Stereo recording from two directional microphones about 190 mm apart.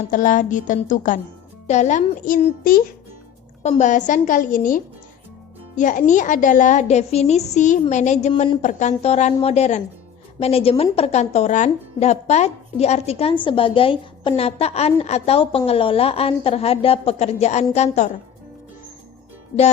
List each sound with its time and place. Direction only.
0.1 s a woman's voice: 45° left (ahead or behind)